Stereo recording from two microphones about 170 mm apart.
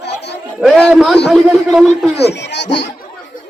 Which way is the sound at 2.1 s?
80° left.